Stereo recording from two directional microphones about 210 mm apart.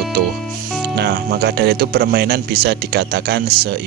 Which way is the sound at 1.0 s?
50° right (ahead or behind).